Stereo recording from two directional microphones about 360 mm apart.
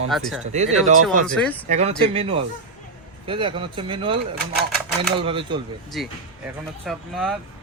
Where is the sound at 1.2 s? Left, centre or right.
Centre.